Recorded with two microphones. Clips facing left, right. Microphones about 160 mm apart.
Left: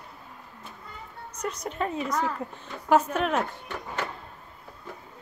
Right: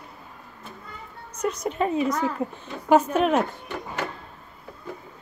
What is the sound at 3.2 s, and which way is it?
Speech, 20° right (ahead or behind).